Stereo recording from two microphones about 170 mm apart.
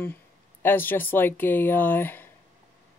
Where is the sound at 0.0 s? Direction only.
10° left (ahead or behind).